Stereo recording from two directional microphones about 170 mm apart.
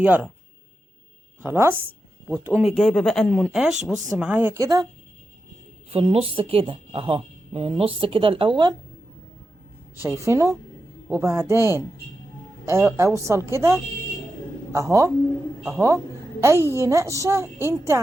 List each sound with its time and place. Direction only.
0.0 s a woman's voice: 10° right (ahead or behind)
1.4 s a woman's voice: 15° right (ahead or behind)
5.9 s a woman's voice: 35° right (ahead or behind)
10.2 s a woman's voice: 20° right (ahead or behind)